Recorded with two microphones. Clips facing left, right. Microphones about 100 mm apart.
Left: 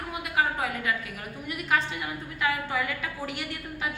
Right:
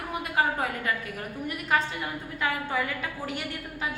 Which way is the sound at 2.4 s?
35° right (ahead or behind).